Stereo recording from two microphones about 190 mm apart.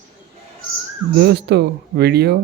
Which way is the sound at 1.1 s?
60° right (ahead or behind).